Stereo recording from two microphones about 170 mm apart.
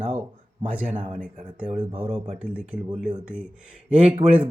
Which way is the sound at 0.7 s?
10° right (ahead or behind).